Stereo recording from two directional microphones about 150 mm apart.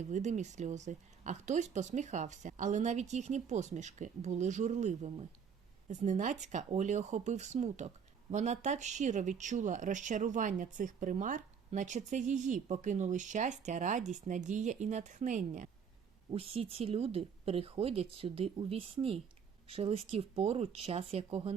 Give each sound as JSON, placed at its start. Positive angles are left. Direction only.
{"t": 0.1, "sound": "speech", "side_deg": -50}
{"t": 16.3, "sound": "speech", "side_deg": -40}